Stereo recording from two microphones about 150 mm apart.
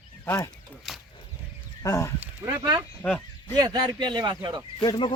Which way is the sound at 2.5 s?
25° right (ahead or behind).